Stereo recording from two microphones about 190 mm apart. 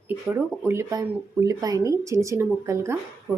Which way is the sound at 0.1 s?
10° right (ahead or behind).